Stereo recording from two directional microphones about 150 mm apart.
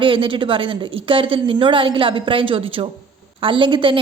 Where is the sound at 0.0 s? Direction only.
35° right (ahead or behind).